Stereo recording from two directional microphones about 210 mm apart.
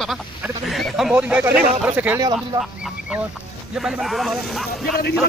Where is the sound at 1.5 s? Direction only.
35° right (ahead or behind).